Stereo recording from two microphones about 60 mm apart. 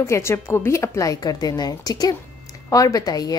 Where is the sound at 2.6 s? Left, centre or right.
Left.